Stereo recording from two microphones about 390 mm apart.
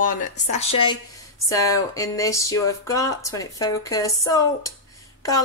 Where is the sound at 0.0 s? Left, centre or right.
Centre.